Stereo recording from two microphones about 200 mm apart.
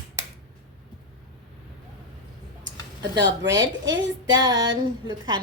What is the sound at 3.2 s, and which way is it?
Speech, 60° right (ahead or behind).